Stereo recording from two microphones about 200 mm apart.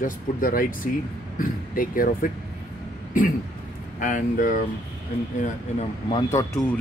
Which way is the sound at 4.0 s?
40° left (ahead or behind).